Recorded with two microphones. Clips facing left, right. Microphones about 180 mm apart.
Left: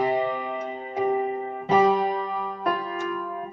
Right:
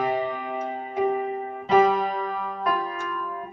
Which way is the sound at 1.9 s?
20° left (ahead or behind).